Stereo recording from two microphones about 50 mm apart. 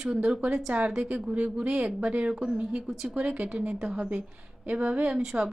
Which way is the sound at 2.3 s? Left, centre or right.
Centre.